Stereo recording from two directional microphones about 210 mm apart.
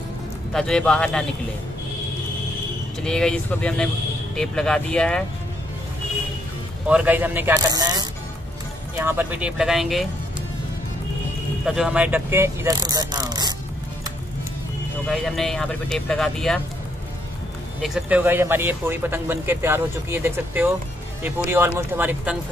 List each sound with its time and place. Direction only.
0.5 s speech: 5° left (ahead or behind)
3.0 s speech: 5° left (ahead or behind)
6.9 s speech: 5° right (ahead or behind)
11.6 s speech: 5° right (ahead or behind); by 13.6 s 20° right (ahead or behind)
15.0 s speech: centre (ahead or behind)
17.8 s speech: 5° right (ahead or behind)